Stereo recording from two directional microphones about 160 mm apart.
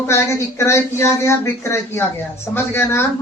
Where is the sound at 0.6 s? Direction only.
20° left (ahead or behind).